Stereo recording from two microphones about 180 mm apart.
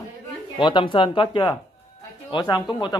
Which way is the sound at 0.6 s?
25° left (ahead or behind).